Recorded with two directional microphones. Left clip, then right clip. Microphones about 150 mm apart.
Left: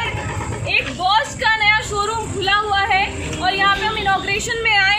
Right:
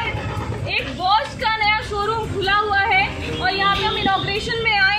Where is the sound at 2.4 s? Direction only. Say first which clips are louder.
Left 1 dB; 25° left (ahead or behind).